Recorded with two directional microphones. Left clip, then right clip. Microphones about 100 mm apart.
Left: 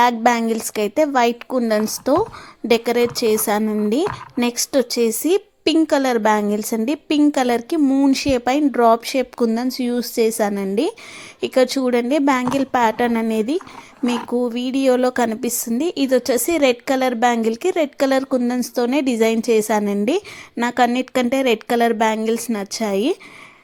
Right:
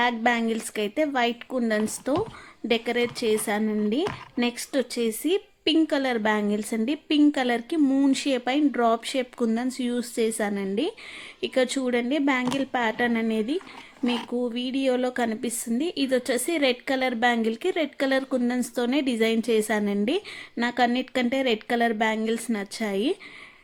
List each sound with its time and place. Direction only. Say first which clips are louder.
0.0 s a woman's voice: left 8 dB; 40° left (ahead or behind)
7.8 s speech: left 5 dB; 15° left (ahead or behind)
8.1 s a woman's voice: left 7 dB; 30° left (ahead or behind)